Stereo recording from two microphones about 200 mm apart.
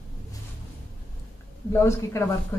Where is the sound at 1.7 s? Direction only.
10° left (ahead or behind).